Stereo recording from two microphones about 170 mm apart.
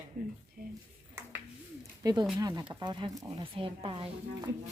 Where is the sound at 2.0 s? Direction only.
25° right (ahead or behind).